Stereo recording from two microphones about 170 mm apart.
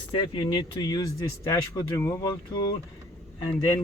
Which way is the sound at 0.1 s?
25° left (ahead or behind).